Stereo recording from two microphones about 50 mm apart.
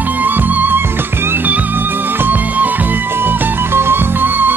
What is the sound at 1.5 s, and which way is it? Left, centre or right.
Music, right.